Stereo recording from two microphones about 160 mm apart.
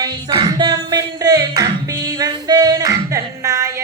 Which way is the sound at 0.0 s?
25° right (ahead or behind).